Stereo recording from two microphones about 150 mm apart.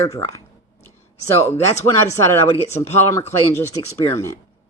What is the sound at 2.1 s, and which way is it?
Speech, 20° left (ahead or behind).